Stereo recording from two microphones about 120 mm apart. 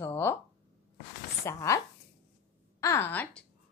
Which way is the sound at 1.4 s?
25° left (ahead or behind).